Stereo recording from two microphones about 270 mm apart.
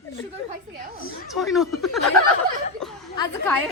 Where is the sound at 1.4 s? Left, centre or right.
Centre.